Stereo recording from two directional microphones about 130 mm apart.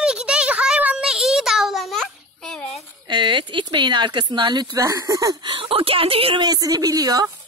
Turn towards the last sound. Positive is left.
turn(degrees=-30)  # may be behind; listen again after turning